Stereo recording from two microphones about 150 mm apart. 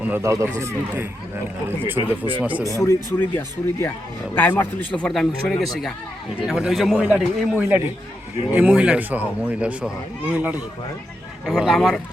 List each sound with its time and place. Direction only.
0.0 s speech: 15° right (ahead or behind)
2.4 s speech: 10° right (ahead or behind)
2.6 s a man's voice: 20° left (ahead or behind); by 11.9 s centre (ahead or behind)